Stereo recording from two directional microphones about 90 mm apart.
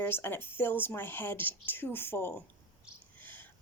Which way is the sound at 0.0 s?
25° left (ahead or behind).